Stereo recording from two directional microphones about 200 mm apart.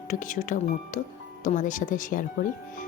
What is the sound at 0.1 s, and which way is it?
A woman's voice, 40° left (ahead or behind).